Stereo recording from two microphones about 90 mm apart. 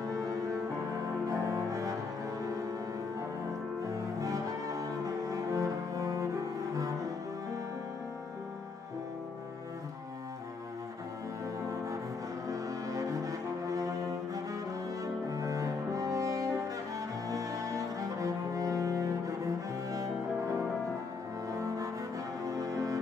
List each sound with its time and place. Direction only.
0.0 s music: 40° right (ahead or behind)
1.3 s cello: 40° right (ahead or behind)
4.2 s cello: 40° right (ahead or behind)
12.4 s brass instrument: 40° right (ahead or behind)
15.3 s cello: 40° right (ahead or behind)
21.5 s cello: 40° right (ahead or behind)
22.5 s music: 40° right (ahead or behind)